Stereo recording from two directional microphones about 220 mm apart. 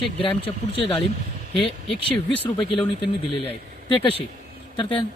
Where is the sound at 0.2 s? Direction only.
25° left (ahead or behind).